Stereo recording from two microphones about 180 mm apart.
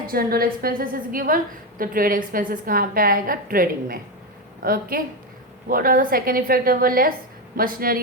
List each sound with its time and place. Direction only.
0.1 s a woman's voice: 55° right (ahead or behind)